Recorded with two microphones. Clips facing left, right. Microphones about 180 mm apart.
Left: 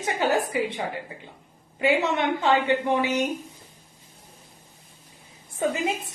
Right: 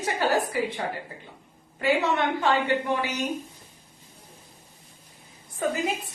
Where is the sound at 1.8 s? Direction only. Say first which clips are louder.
Left 1 dB; 20° left (ahead or behind).